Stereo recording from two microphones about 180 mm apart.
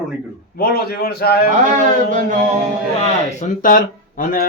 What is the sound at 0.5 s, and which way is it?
Speech, 60° left (ahead or behind).